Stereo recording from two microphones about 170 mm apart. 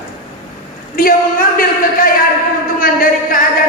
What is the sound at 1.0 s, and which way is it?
A man's voice, 55° left (ahead or behind).